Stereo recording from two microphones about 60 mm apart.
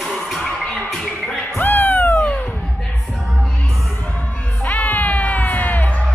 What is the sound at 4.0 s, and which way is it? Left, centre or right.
Music, left.